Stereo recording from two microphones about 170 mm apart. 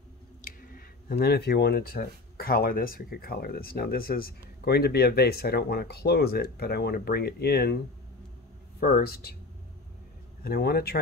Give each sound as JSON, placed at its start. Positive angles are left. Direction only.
{"t": 0.4, "sound": "speech", "side_deg": 50}
{"t": 10.4, "sound": "speech", "side_deg": 65}